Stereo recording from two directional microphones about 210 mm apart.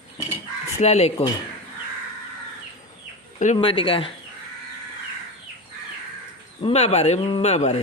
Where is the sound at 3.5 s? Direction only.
25° left (ahead or behind).